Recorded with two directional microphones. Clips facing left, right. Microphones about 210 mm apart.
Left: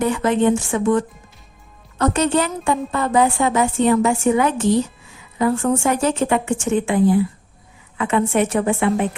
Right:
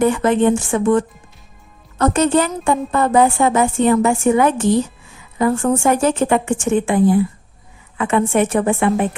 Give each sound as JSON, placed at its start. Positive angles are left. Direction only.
{"t": 0.0, "sound": "a woman's voice", "side_deg": -50}